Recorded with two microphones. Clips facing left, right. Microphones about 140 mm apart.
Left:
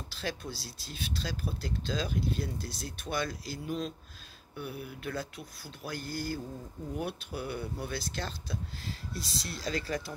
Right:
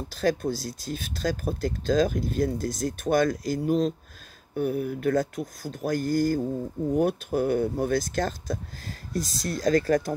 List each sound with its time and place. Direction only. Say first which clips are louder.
0.1 s speech: right 13 dB; 45° right (ahead or behind)